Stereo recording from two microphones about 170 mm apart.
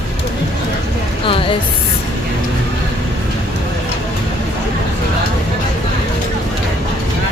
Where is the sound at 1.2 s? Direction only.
30° left (ahead or behind).